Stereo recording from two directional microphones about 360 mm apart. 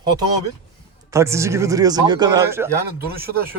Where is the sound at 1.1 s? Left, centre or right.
Centre.